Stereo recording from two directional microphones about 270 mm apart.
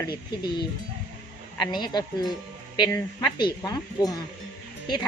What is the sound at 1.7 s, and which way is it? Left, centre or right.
Speech, centre.